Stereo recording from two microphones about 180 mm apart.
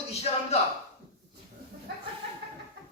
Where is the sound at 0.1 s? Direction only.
35° left (ahead or behind).